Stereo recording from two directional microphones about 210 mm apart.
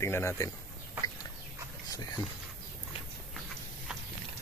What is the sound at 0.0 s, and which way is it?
Speech, 10° left (ahead or behind).